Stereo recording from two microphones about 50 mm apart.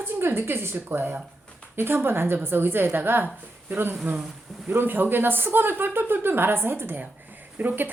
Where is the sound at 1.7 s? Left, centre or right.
Right.